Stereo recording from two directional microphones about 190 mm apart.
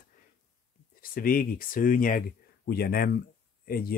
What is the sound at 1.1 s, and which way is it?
Speech, 50° left (ahead or behind).